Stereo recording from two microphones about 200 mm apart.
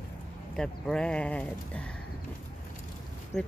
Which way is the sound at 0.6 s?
5° left (ahead or behind).